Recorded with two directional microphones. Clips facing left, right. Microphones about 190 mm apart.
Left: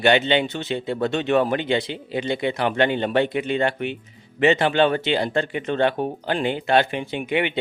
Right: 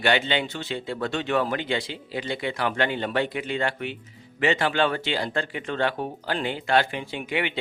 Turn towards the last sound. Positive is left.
turn(degrees=20)  # may be behind; listen again after turning